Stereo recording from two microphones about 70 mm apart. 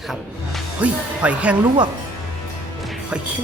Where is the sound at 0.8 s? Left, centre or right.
Centre.